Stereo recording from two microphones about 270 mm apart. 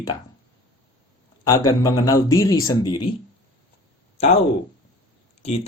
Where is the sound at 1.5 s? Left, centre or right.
Centre.